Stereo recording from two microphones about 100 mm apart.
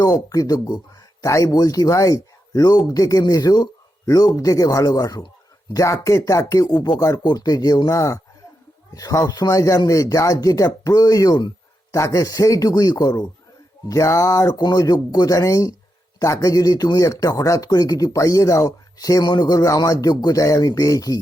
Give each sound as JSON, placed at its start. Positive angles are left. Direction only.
{"t": 0.0, "sound": "speech", "side_deg": 35}
{"t": 11.9, "sound": "speech", "side_deg": 35}
{"t": 14.6, "sound": "speech", "side_deg": 40}